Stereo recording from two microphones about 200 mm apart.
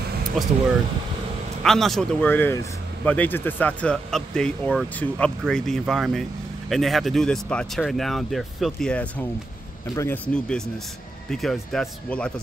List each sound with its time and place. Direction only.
1.6 s speech: centre (ahead or behind)